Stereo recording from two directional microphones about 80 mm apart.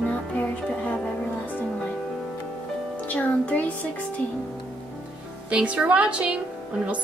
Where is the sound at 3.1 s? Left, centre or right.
Centre.